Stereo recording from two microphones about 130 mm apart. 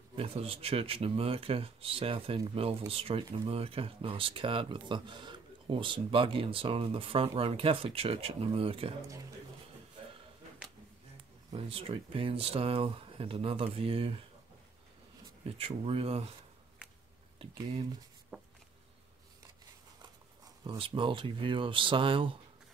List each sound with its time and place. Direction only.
0.1 s speech: 45° right (ahead or behind)
11.5 s speech: 45° right (ahead or behind)
15.4 s speech: 50° right (ahead or behind)
18.3 s a sound: 10° right (ahead or behind)
20.6 s speech: 40° right (ahead or behind)